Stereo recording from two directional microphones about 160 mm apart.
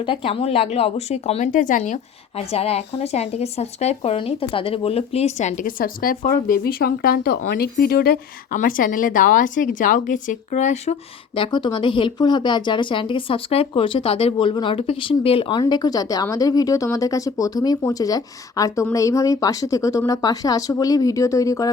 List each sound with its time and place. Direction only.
0.0 s speech: 35° left (ahead or behind); by 8.5 s 70° left (ahead or behind)
8.5 s a woman's voice: 60° left (ahead or behind)
11.3 s speech: 30° left (ahead or behind)